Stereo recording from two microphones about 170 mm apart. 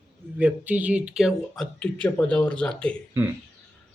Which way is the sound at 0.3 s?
10° right (ahead or behind).